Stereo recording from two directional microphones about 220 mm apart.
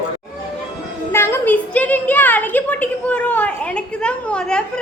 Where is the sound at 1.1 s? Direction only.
10° left (ahead or behind).